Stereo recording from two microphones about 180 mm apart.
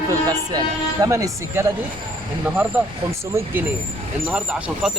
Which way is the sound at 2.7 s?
10° right (ahead or behind).